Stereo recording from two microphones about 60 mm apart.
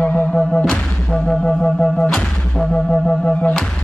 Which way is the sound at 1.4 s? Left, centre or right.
Centre.